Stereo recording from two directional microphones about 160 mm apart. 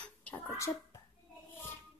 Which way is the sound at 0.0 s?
10° left (ahead or behind).